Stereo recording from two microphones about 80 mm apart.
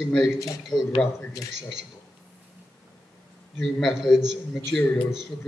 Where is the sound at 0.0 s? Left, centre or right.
Centre.